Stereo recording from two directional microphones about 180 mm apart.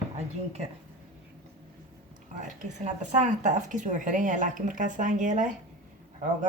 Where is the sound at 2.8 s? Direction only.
40° right (ahead or behind).